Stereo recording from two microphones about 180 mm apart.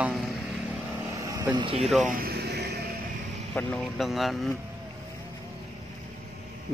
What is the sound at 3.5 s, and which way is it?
Speech, centre (ahead or behind).